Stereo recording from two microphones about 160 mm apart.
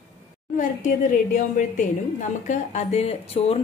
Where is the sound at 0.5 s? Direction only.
55° left (ahead or behind).